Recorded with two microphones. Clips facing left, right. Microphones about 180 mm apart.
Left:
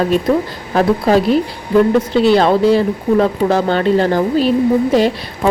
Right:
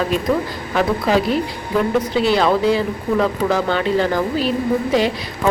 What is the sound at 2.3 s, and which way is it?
A woman's voice, 30° left (ahead or behind).